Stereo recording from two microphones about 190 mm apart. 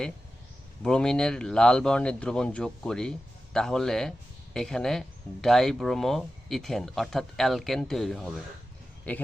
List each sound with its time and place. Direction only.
0.8 s a man's voice: 5° left (ahead or behind)